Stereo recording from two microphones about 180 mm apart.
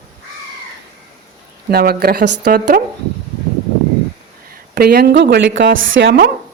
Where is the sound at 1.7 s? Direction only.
60° right (ahead or behind).